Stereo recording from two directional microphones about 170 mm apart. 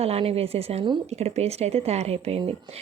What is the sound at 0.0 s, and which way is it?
A woman's voice, 35° right (ahead or behind).